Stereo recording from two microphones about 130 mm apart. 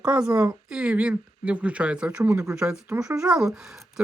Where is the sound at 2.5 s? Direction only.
5° right (ahead or behind).